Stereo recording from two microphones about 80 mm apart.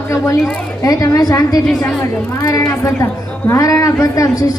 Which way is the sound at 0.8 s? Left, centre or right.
Left.